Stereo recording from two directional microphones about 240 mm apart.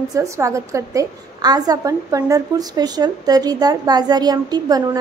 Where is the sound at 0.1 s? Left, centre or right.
Centre.